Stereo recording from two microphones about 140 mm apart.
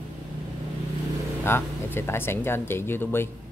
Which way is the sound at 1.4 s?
15° left (ahead or behind).